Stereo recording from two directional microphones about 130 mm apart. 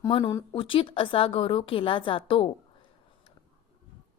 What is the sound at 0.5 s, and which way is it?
A woman's voice, 45° left (ahead or behind).